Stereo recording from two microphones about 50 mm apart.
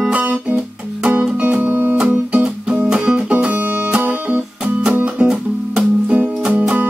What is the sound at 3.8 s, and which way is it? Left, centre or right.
Guitar, right.